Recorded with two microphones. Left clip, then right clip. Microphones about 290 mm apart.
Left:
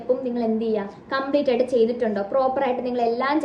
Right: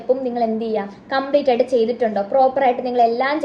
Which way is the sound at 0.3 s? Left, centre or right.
Centre.